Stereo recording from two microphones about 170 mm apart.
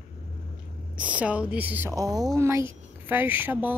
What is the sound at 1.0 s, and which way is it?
Speech, 5° right (ahead or behind).